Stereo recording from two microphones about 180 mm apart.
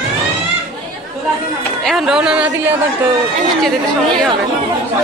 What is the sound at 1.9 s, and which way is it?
Speech, centre (ahead or behind).